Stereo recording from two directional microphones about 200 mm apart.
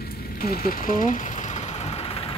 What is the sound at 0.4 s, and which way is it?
Vehicle, 45° left (ahead or behind).